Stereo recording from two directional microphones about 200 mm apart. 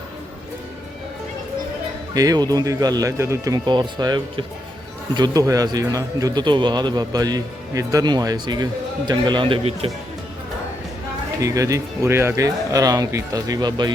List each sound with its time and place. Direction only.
2.1 s a man's voice: 20° right (ahead or behind)
11.3 s speech: 15° right (ahead or behind)